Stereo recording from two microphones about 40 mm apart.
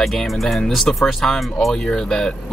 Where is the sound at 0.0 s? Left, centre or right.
Centre.